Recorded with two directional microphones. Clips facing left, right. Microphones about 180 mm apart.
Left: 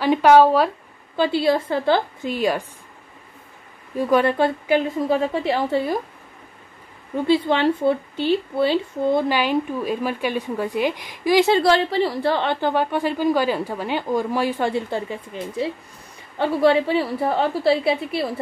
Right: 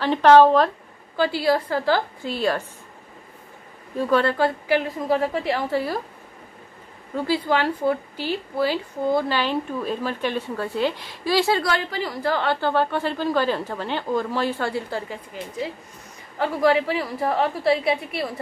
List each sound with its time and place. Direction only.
0.0 s a woman's voice: 10° left (ahead or behind)
1.1 s a woman's voice: 20° left (ahead or behind)
3.9 s a woman's voice: 15° left (ahead or behind)
7.2 s a woman's voice: 25° left (ahead or behind)
9.3 s a woman's voice: 10° left (ahead or behind); by 18.2 s 30° left (ahead or behind)